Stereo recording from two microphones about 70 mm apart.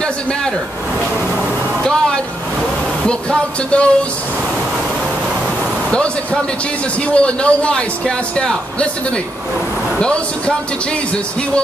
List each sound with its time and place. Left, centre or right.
1.9 s a sound: centre
3.1 s a man's voice: centre
7.1 s a man's voice: centre